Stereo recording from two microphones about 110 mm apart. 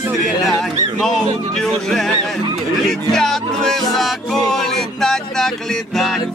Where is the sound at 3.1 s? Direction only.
5° left (ahead or behind).